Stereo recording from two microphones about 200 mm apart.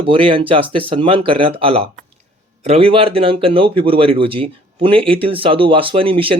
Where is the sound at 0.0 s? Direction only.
25° right (ahead or behind).